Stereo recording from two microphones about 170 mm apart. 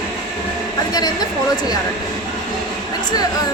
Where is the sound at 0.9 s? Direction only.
25° left (ahead or behind).